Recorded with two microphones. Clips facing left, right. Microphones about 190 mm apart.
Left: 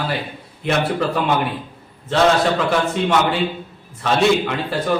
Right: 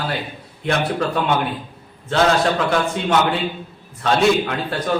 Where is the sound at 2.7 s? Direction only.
Centre (ahead or behind).